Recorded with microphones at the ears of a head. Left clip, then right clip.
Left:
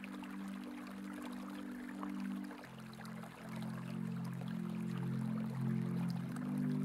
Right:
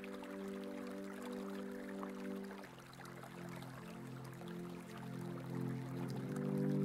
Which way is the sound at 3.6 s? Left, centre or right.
Left.